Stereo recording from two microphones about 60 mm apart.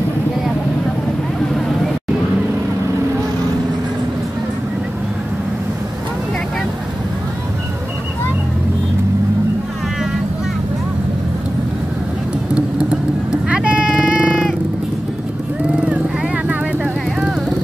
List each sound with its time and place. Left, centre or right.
12.5 s vehicle: centre
13.8 s a sound: centre
16.4 s vehicle: centre